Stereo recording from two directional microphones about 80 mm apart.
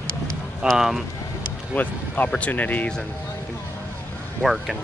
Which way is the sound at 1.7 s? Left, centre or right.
Left.